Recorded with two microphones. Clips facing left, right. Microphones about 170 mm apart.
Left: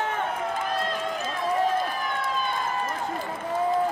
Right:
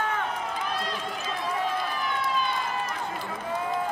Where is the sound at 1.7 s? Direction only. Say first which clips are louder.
Left 2 dB; 45° left (ahead or behind).